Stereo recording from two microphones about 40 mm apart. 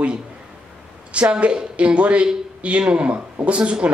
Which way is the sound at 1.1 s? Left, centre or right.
Right.